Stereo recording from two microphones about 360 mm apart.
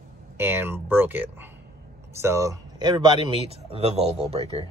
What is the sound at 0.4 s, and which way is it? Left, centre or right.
Speech, centre.